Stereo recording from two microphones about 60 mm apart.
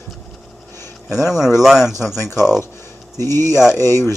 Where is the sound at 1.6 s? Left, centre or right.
Centre.